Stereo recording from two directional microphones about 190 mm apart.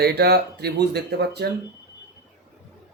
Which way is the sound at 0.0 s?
55° right (ahead or behind).